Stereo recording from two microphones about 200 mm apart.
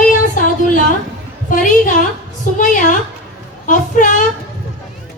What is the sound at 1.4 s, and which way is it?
Speech, 40° left (ahead or behind).